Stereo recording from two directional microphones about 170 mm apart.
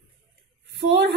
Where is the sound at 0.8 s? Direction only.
90° right.